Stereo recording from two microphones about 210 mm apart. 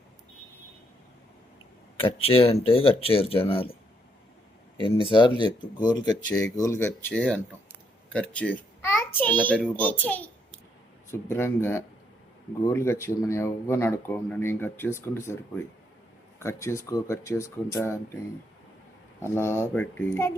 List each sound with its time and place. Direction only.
2.0 s speech: 25° left (ahead or behind)
4.8 s a child's voice: 25° left (ahead or behind)
19.2 s speech: 10° left (ahead or behind)